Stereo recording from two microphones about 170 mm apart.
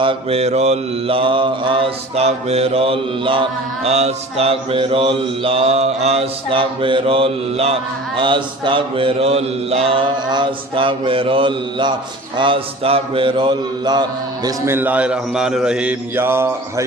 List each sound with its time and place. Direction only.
0.0 s mantra: 35° right (ahead or behind)
14.4 s a man's voice: 15° right (ahead or behind)